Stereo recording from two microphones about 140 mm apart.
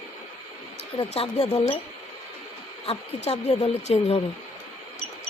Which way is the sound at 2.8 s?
50° left (ahead or behind).